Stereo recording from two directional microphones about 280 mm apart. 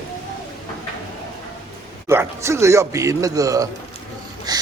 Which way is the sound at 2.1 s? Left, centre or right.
Centre.